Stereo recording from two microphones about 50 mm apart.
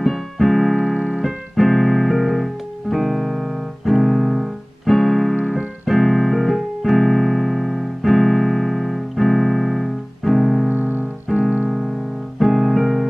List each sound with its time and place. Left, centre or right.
0.0 s keyboard: centre
10.7 s music: right
11.3 s music: centre